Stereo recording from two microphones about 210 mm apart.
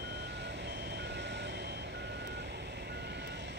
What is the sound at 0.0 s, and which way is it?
Reversing beeps, 55° right (ahead or behind).